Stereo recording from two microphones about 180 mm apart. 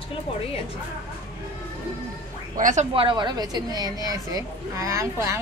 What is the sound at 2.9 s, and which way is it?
A woman's voice, 25° right (ahead or behind).